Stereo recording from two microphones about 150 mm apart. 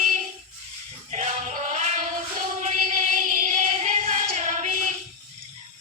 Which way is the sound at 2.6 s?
55° right (ahead or behind).